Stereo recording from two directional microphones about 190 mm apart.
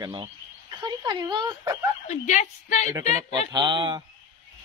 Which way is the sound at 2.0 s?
40° left (ahead or behind).